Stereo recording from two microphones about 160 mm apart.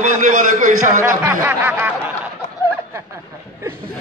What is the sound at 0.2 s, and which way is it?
Speech, 55° right (ahead or behind).